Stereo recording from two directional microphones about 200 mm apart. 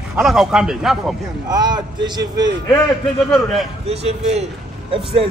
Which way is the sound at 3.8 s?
30° right (ahead or behind).